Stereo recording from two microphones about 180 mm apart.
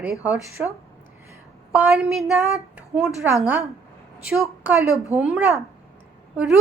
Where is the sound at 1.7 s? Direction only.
5° right (ahead or behind).